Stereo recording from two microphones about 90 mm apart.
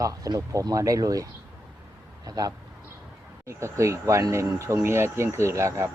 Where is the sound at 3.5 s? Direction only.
30° right (ahead or behind).